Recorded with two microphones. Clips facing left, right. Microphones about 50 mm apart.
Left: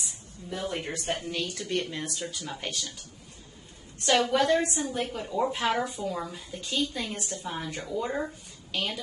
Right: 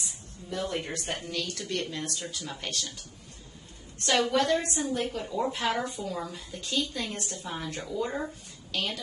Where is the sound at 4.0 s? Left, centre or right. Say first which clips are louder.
Left 2 dB; centre.